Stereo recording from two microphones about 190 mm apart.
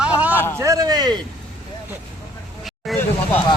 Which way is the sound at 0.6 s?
20° right (ahead or behind).